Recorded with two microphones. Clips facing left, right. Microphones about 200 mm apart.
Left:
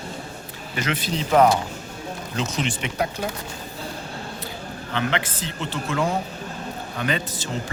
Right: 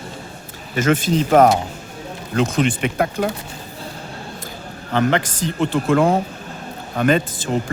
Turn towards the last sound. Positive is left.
turn(degrees=-50)  # may be behind; listen again after turning